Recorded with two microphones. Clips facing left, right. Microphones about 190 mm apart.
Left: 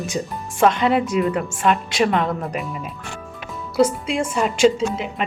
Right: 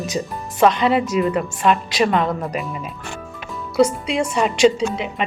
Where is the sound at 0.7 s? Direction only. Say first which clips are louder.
Right 1 dB; 55° left (ahead or behind).